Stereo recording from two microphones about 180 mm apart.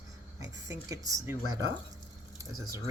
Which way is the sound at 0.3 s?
20° right (ahead or behind).